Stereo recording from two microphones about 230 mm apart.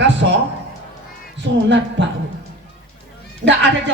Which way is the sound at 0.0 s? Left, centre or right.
Right.